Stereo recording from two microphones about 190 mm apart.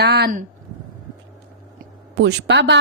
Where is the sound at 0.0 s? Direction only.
55° right (ahead or behind).